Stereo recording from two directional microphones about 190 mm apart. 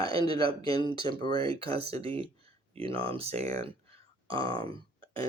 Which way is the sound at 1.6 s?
30° right (ahead or behind).